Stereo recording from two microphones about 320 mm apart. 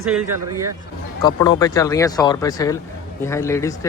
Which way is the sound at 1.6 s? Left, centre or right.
Centre.